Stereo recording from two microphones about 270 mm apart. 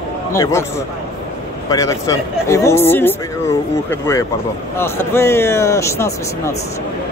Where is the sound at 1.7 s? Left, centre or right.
Centre.